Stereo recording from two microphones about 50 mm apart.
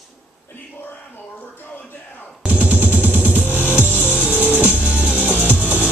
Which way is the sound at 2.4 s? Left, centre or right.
Right.